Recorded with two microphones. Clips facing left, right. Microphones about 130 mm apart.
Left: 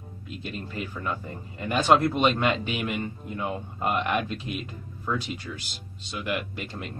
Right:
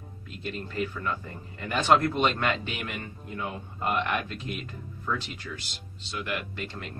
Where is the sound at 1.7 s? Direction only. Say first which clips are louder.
Left 2 dB; 10° left (ahead or behind).